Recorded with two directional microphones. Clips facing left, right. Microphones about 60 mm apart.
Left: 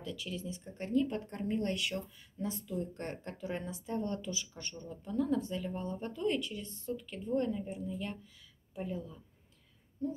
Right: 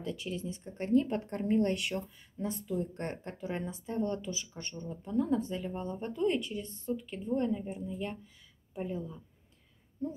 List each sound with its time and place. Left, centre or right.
0.1 s speech: right